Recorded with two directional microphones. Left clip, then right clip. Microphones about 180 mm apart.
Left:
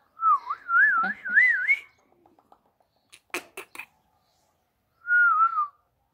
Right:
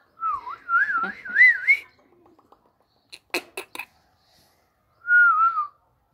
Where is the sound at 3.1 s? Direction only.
5° right (ahead or behind).